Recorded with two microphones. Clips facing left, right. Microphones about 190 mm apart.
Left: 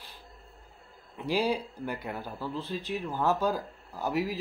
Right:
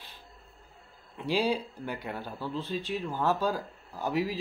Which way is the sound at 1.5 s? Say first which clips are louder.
Even; 10° left (ahead or behind).